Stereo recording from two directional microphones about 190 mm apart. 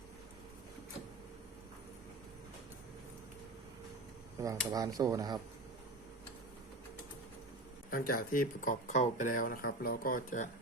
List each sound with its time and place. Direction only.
4.4 s speech: 15° right (ahead or behind)
7.9 s speech: 50° left (ahead or behind)